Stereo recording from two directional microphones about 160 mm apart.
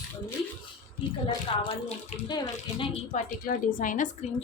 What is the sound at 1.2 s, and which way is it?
A woman's voice, 40° left (ahead or behind).